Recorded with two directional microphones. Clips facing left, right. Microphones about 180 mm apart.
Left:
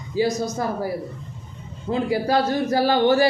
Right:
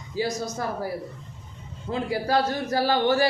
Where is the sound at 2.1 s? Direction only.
15° left (ahead or behind).